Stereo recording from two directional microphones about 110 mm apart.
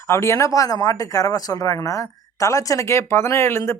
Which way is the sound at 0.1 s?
25° left (ahead or behind).